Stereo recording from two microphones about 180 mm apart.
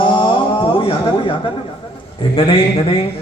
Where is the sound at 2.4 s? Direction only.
30° left (ahead or behind).